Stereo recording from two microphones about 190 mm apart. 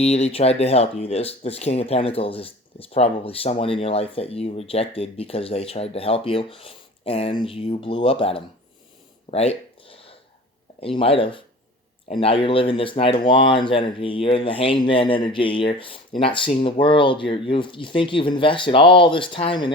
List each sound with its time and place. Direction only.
0.0 s speech: 35° left (ahead or behind)
9.3 s a sound: 35° left (ahead or behind)
10.8 s speech: 30° left (ahead or behind)